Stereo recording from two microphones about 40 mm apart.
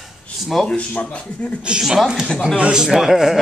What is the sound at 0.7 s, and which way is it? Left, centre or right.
Speech, left.